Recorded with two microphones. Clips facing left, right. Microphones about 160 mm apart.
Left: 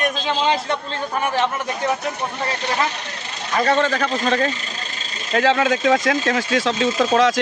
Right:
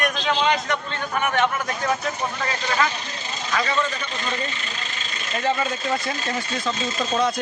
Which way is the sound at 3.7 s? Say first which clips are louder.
Left 7 dB; 90° left.